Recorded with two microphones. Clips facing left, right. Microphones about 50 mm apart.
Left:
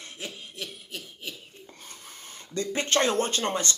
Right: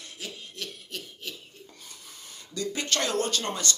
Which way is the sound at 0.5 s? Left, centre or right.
Centre.